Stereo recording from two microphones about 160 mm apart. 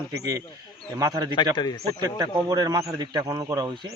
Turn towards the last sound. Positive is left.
turn(degrees=-30)  # may be behind; listen again after turning